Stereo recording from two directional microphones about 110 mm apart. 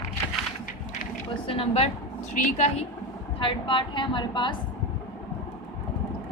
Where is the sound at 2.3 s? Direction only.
90° left.